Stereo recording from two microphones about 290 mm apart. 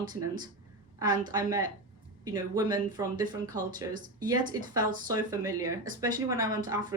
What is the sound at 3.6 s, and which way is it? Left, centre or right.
Speech, right.